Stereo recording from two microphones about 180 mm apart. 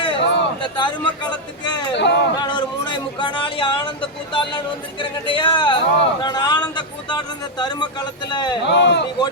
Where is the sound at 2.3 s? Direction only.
25° left (ahead or behind).